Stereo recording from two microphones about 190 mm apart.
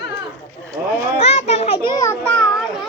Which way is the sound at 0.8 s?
10° right (ahead or behind).